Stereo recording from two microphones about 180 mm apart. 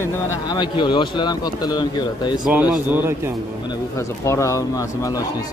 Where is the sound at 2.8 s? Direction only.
10° right (ahead or behind).